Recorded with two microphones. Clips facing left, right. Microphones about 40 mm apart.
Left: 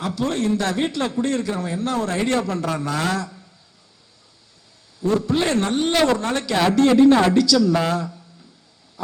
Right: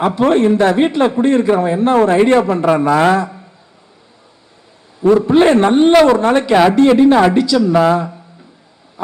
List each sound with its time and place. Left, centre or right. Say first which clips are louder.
0.0 s a man's voice: right 11 dB; right
4.9 s a man's voice: right 10 dB; right